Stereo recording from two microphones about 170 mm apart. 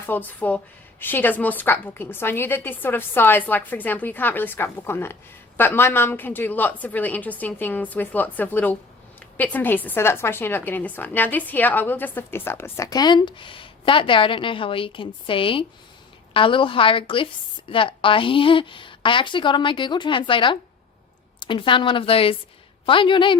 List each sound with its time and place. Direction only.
0.0 s a woman's voice: 10° left (ahead or behind); by 23.4 s 30° left (ahead or behind)